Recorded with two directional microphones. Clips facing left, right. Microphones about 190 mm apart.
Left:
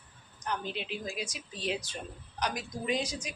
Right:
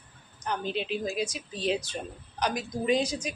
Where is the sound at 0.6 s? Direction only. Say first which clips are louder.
Right 6 dB; 30° right (ahead or behind).